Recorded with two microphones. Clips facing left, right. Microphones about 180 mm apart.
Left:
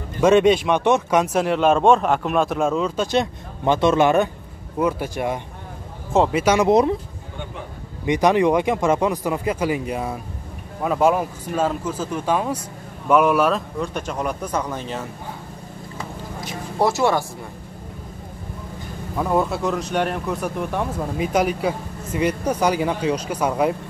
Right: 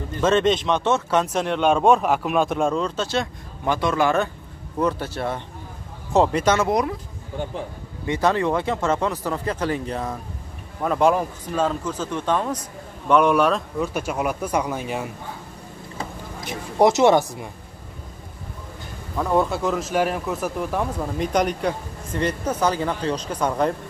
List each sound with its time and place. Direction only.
0.2 s speech: 10° left (ahead or behind)
3.1 s speech: 20° left (ahead or behind)
6.7 s speech: 25° left (ahead or behind)
8.0 s speech: 15° left (ahead or behind); by 15.0 s 10° right (ahead or behind)
16.7 s speech: 20° right (ahead or behind)
19.1 s speech: 5° left (ahead or behind)